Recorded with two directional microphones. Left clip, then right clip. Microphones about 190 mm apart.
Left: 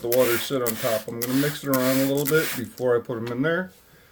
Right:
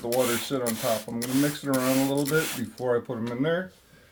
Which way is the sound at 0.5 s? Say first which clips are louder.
Left 3 dB; 60° left (ahead or behind).